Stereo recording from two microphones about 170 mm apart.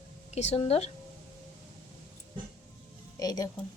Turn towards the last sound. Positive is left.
turn(degrees=20)  # may be behind; listen again after turning